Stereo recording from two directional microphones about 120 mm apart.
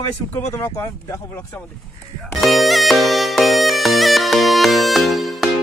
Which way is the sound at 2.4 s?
Centre (ahead or behind).